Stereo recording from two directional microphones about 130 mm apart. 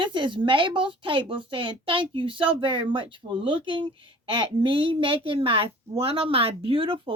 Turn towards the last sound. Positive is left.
turn(degrees=-45)  # may be behind; listen again after turning